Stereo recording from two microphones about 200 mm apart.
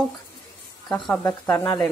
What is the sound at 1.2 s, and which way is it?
Speech, 10° left (ahead or behind).